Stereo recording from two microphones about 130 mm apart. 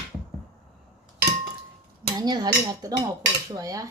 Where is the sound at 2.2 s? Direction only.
30° right (ahead or behind).